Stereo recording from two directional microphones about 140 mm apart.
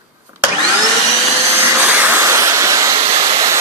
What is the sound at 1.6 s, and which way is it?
Vacuum cleaner, 15° right (ahead or behind).